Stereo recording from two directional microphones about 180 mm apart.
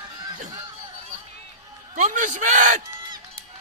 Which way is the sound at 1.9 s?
45° right (ahead or behind).